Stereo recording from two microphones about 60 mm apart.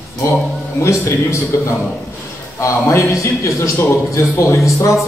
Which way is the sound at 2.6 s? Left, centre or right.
Left.